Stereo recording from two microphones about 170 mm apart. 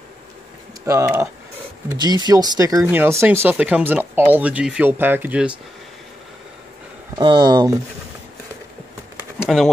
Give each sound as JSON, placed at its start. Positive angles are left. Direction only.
{"t": 0.8, "sound": "speech", "side_deg": -15}
{"t": 7.2, "sound": "speech", "side_deg": -25}
{"t": 9.4, "sound": "pigeon", "side_deg": 0}